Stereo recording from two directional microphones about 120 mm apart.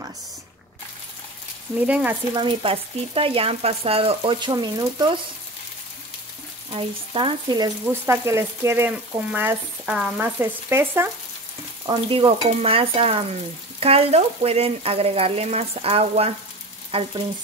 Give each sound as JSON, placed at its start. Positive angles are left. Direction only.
{"t": 1.8, "sound": "speech", "side_deg": -10}
{"t": 2.3, "sound": "speech", "side_deg": -45}
{"t": 4.4, "sound": "speech", "side_deg": -35}
{"t": 6.7, "sound": "speech", "side_deg": -50}
{"t": 7.9, "sound": "speech", "side_deg": -20}
{"t": 10.2, "sound": "speech", "side_deg": -20}
{"t": 11.8, "sound": "speech", "side_deg": -40}
{"t": 12.4, "sound": "stir", "side_deg": -55}
{"t": 16.9, "sound": "speech", "side_deg": -50}